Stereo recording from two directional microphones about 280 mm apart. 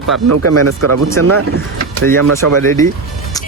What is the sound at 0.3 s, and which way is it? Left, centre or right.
Speech, right.